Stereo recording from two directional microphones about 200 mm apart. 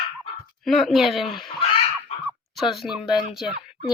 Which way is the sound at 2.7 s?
Centre (ahead or behind).